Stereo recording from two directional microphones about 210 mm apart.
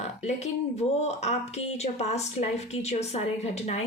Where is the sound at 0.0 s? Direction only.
30° left (ahead or behind).